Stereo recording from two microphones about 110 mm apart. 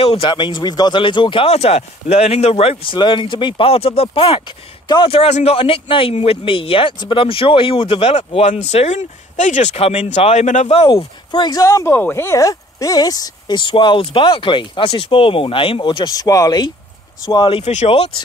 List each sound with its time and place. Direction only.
0.0 s speech: 60° left (ahead or behind)
0.3 s speech: 45° left (ahead or behind)
1.5 s speech: 75° left (ahead or behind); by 8.1 s 55° left (ahead or behind)
8.1 s speech: 70° left (ahead or behind)
11.0 s speech: 40° left (ahead or behind)
11.6 s speech: 25° left (ahead or behind)
17.5 s speech: 75° left (ahead or behind)